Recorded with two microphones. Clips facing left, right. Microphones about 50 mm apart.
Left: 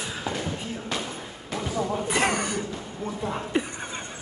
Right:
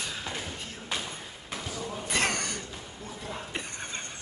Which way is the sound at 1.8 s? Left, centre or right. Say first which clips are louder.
Left 12 dB; left.